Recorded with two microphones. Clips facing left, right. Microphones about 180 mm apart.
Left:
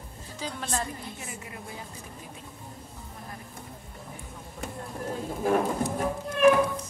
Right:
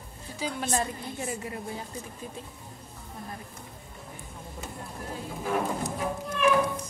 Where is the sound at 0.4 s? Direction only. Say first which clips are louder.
Right 3 dB; 10° right (ahead or behind).